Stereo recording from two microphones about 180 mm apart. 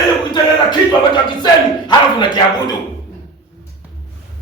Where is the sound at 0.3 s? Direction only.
25° left (ahead or behind).